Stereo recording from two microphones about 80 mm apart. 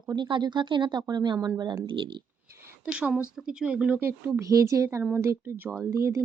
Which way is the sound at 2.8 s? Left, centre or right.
Centre.